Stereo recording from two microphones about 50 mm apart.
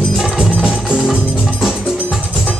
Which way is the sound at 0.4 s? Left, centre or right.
Centre.